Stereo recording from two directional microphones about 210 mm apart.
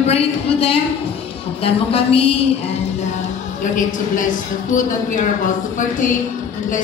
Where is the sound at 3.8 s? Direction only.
40° left (ahead or behind).